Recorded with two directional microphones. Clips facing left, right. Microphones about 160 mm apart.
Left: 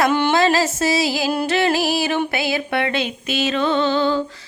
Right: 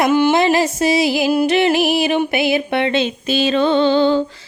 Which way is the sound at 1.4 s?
20° right (ahead or behind).